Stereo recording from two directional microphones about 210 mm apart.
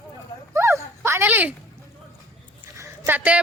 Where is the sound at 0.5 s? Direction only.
10° right (ahead or behind).